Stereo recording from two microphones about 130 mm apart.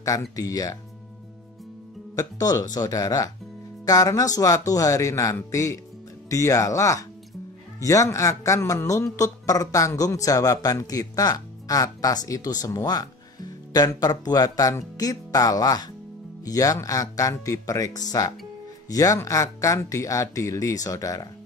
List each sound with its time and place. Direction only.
0.4 s speech: 25° left (ahead or behind)
2.1 s speech: 30° left (ahead or behind)